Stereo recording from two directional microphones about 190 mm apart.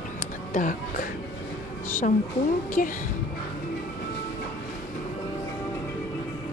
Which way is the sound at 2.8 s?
45° left (ahead or behind).